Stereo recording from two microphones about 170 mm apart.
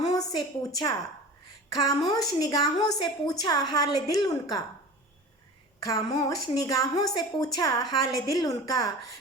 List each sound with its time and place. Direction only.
0.0 s a sound: 20° left (ahead or behind)
2.0 s a woman's voice: 20° left (ahead or behind)
5.8 s a woman's voice: 20° left (ahead or behind)